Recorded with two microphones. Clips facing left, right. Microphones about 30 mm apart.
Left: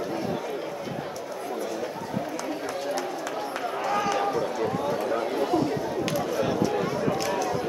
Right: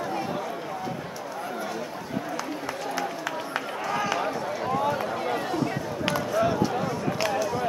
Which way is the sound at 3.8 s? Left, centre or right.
Centre.